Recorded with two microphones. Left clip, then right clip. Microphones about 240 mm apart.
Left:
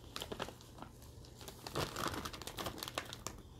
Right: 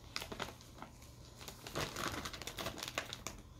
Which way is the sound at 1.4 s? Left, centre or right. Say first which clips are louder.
Left 1 dB; centre.